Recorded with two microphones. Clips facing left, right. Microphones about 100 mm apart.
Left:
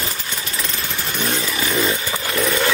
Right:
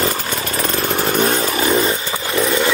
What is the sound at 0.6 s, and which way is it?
Chainsaw, 55° right (ahead or behind).